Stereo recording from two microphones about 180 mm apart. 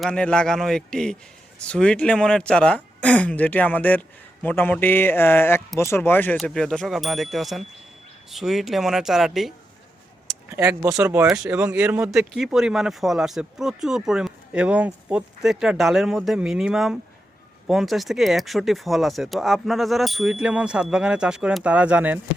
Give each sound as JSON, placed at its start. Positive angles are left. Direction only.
{"t": 0.0, "sound": "speech", "side_deg": 5}
{"t": 10.2, "sound": "speech", "side_deg": -15}